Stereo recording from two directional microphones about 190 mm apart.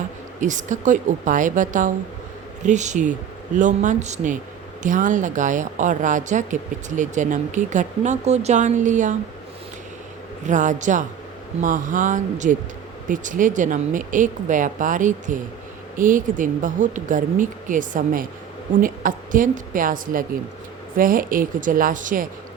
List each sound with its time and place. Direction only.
0.3 s speech: 40° right (ahead or behind)
10.4 s speech: 40° right (ahead or behind)